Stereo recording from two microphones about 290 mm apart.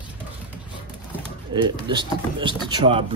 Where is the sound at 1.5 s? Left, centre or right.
Centre.